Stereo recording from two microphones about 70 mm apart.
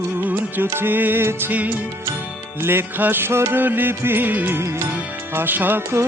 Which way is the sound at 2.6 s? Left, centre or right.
Right.